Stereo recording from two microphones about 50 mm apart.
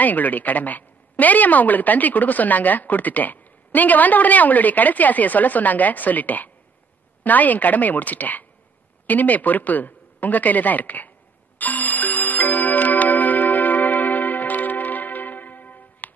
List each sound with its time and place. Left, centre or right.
0.0 s a woman's voice: left
11.5 s music: left